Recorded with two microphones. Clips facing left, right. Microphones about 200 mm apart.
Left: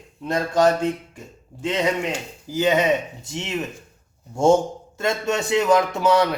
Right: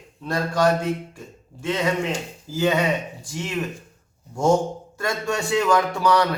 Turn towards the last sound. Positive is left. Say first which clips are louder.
# left 2 dB
turn(degrees=20)  # may be behind; listen again after turning